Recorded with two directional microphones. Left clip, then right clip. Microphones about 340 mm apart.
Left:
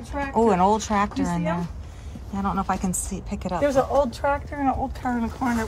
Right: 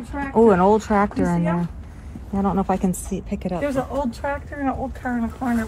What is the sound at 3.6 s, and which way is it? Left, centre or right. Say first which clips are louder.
Speech: left 5 dB; left.